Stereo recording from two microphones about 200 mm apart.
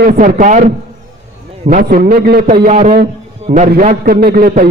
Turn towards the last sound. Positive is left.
turn(degrees=-45)  # may be behind; listen again after turning